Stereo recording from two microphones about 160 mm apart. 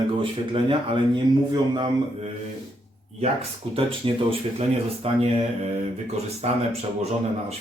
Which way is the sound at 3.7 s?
35° right (ahead or behind).